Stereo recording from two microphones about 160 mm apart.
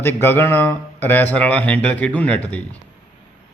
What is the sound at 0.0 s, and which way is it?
A man's voice, 15° left (ahead or behind).